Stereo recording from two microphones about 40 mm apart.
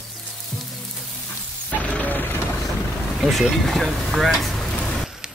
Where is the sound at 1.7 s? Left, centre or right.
Left.